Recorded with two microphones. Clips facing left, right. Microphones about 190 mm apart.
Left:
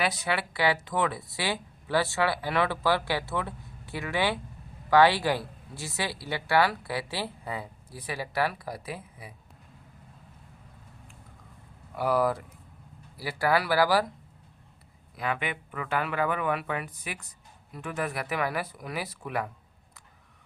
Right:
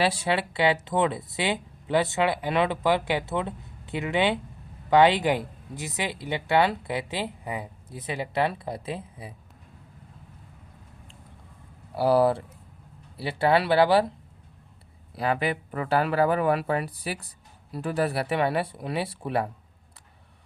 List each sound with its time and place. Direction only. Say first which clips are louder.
0.0 s speech: right 4 dB; 30° right (ahead or behind)
11.9 s speech: right 5 dB; 30° right (ahead or behind)
15.1 s speech: right 6 dB; 35° right (ahead or behind)